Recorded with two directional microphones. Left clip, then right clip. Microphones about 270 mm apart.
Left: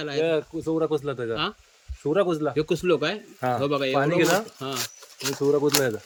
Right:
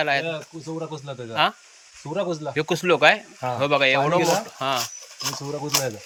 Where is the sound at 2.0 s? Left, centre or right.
Left.